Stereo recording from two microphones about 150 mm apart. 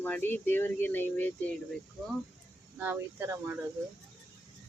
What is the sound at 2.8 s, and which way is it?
Speech, 15° right (ahead or behind).